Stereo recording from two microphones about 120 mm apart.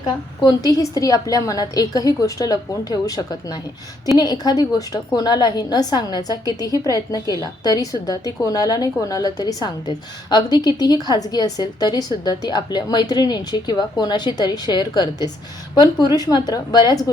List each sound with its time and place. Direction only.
0.0 s a woman's voice: 30° left (ahead or behind)